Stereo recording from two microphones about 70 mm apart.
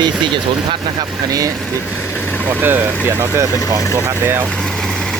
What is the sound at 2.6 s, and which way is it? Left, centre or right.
Speech, right.